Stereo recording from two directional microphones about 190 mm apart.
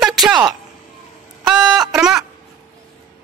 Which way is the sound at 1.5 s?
5° right (ahead or behind).